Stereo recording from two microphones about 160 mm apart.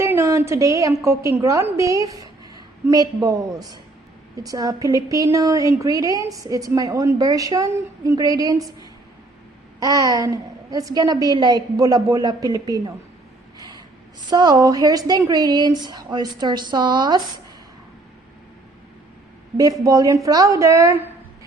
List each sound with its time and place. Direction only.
0.0 s a woman's voice: 15° right (ahead or behind)
9.8 s a woman's voice: 20° right (ahead or behind)
13.6 s gasp: 25° right (ahead or behind)
14.3 s a woman's voice: 25° right (ahead or behind)
19.8 s a woman's voice: 20° right (ahead or behind)